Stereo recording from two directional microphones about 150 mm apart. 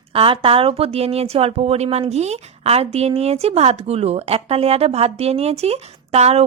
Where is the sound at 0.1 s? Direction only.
40° right (ahead or behind).